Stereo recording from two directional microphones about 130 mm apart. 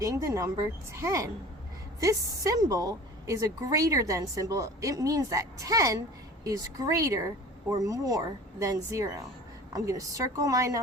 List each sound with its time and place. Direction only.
0.0 s a woman's voice: 25° right (ahead or behind)